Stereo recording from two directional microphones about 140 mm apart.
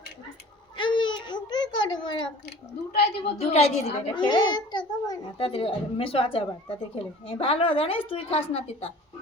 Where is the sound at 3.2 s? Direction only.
45° left (ahead or behind).